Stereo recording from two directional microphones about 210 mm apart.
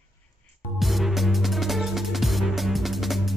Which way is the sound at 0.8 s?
Centre (ahead or behind).